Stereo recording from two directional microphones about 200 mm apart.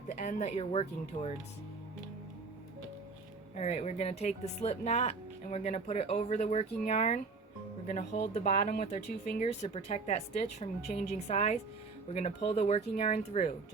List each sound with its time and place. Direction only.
0.1 s speech: 40° left (ahead or behind)
3.5 s speech: 35° left (ahead or behind)